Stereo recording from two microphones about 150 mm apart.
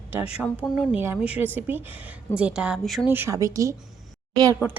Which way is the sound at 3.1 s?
15° right (ahead or behind).